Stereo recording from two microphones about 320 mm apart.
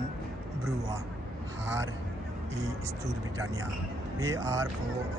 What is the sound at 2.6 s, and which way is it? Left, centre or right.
Speech, centre.